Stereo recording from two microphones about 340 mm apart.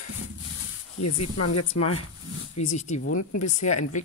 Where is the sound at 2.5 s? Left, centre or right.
Left.